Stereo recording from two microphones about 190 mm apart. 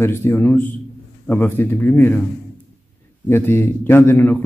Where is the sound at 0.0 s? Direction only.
15° left (ahead or behind).